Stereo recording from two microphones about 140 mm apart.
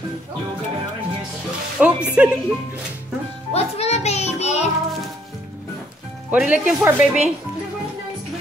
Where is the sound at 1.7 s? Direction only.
10° right (ahead or behind).